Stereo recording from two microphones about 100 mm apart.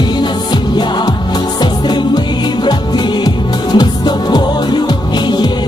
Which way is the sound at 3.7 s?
45° left (ahead or behind).